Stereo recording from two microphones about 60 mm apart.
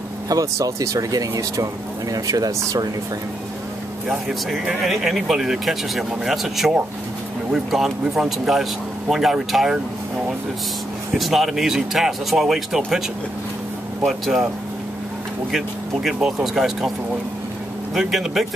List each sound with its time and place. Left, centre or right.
0.3 s speech: right
4.7 s speech: centre
11.1 s speech: centre
14.0 s speech: centre
15.5 s speech: centre
17.9 s speech: centre